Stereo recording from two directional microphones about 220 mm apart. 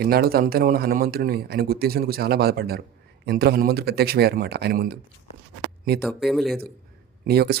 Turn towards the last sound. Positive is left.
turn(degrees=-45)  # may be behind; listen again after turning